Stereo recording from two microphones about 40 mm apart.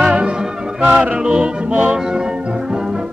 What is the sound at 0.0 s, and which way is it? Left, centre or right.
Music, right.